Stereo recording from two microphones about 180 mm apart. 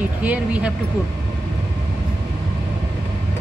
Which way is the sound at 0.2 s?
5° right (ahead or behind).